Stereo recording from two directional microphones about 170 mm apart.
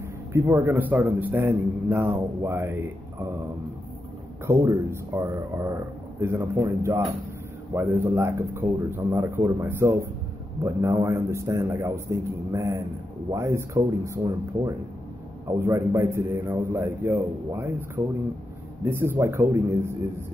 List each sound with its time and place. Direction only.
0.3 s a man's voice: 10° right (ahead or behind)
4.5 s a man's voice: 15° right (ahead or behind)